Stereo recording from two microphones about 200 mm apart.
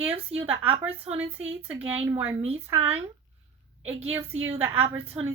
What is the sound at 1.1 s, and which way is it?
Speech, 35° right (ahead or behind).